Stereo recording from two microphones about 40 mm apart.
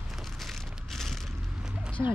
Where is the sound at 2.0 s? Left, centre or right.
Right.